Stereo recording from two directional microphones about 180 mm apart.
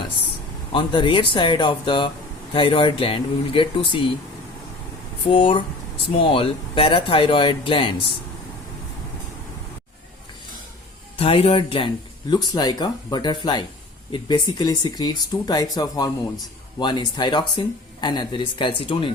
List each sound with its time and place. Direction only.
0.7 s speech: 25° left (ahead or behind)
5.3 s speech: 30° left (ahead or behind)
11.2 s speech: 30° left (ahead or behind)